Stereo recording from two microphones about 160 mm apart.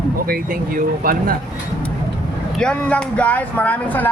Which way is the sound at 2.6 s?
5° left (ahead or behind).